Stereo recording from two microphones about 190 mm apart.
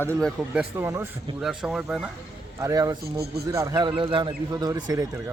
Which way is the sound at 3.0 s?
55° right (ahead or behind).